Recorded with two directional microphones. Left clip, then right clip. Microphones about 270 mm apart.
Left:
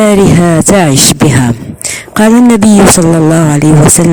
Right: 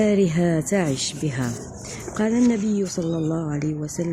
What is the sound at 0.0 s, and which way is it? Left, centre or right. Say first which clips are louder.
Speech: left 14 dB; left.